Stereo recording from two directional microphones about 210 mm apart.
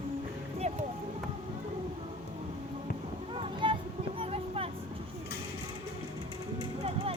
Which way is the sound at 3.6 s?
25° right (ahead or behind).